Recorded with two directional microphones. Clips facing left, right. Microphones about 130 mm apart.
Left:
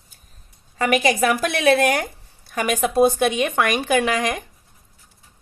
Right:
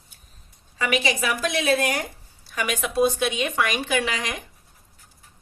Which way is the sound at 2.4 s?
45° left (ahead or behind).